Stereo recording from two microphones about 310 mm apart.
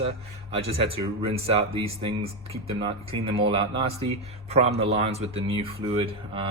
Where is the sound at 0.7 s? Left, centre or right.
Centre.